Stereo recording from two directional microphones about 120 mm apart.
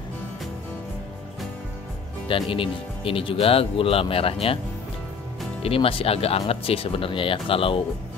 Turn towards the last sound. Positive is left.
turn(degrees=50)  # may be behind; listen again after turning